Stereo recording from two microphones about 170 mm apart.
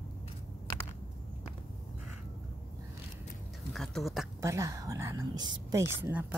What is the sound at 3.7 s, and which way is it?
Speech, centre (ahead or behind).